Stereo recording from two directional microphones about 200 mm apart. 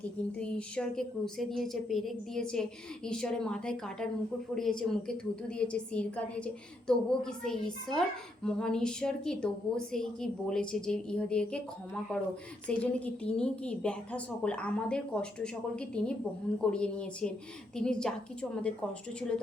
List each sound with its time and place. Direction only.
0.0 s a woman's voice: 5° left (ahead or behind)
12.8 s a woman's voice: 5° left (ahead or behind)